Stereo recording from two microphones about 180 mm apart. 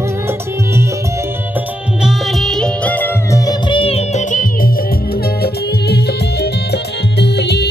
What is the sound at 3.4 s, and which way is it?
Music, 30° left (ahead or behind).